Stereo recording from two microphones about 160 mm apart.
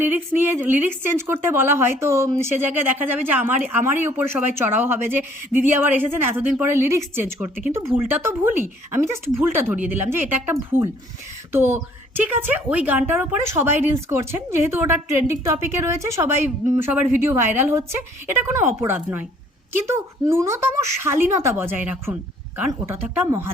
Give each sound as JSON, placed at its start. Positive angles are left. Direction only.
{"t": 0.0, "sound": "a woman's voice", "side_deg": -10}